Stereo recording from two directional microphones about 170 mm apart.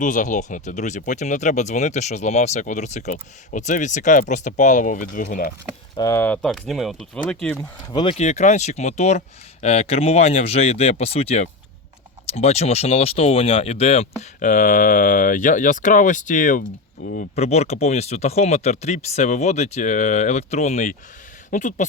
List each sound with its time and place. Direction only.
0.0 s speech: 50° left (ahead or behind)
6.0 s speech: 15° left (ahead or behind)
8.2 s speech: 45° left (ahead or behind)
17.2 s speech: 40° left (ahead or behind)